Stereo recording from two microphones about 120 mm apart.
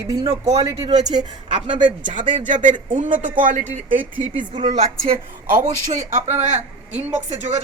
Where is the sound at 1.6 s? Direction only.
40° right (ahead or behind).